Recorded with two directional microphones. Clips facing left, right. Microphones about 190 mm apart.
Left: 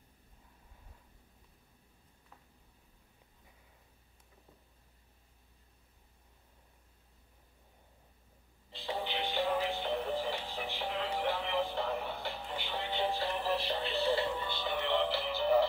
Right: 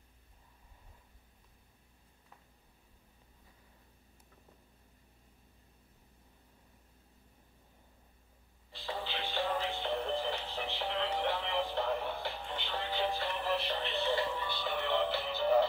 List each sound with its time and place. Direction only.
8.7 s music: 20° left (ahead or behind)
13.3 s music: 35° left (ahead or behind)